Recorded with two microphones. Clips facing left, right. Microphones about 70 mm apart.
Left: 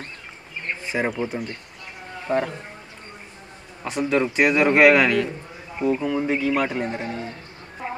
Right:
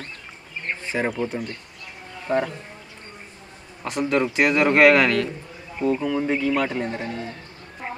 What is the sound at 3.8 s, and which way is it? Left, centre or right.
A man's voice, centre.